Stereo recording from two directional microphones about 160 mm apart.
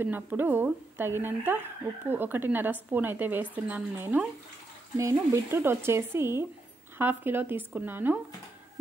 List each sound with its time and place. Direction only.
0.0 s a woman's voice: 10° right (ahead or behind)